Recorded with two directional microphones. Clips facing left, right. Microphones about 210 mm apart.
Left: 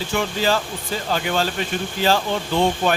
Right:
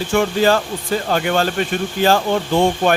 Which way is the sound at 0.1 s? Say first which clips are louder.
Right 6 dB; 50° right (ahead or behind).